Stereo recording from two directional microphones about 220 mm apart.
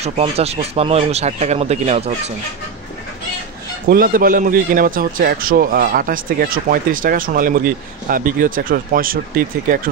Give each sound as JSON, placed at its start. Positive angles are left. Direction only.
{"t": 0.0, "sound": "speech", "side_deg": -30}
{"t": 3.9, "sound": "a man's voice", "side_deg": -40}